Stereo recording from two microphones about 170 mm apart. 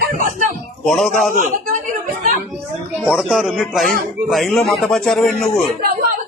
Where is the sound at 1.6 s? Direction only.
55° right (ahead or behind).